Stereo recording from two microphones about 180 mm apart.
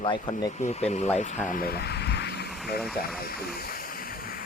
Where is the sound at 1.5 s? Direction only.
55° left (ahead or behind).